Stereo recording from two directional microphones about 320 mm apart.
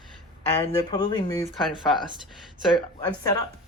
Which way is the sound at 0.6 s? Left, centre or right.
Centre.